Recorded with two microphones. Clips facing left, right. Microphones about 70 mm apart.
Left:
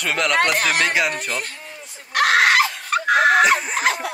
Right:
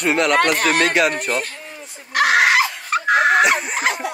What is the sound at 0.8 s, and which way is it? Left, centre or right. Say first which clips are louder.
Speech: right 3 dB; centre.